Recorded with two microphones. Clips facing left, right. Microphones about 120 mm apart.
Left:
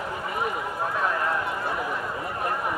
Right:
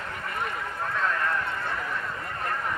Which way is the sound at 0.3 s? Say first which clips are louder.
Left 3 dB; 10° left (ahead or behind).